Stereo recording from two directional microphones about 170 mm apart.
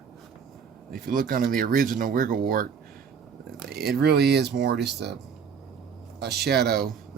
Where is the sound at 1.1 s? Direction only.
55° right (ahead or behind).